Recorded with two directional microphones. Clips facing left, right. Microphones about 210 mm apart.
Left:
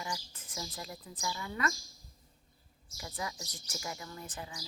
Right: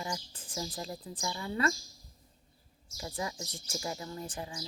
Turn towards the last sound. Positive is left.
turn(degrees=-30)  # may be behind; listen again after turning